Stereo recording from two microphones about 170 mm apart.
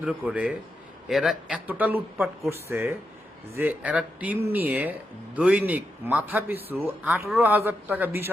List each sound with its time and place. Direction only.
0.0 s a man's voice: 10° right (ahead or behind)